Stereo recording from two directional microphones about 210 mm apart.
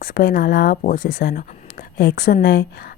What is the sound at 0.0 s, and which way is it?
A woman's voice, 45° left (ahead or behind).